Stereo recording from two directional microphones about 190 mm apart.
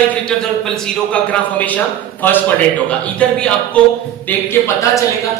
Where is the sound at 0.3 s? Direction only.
5° left (ahead or behind).